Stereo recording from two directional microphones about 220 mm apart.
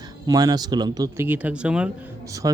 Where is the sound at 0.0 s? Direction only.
15° right (ahead or behind).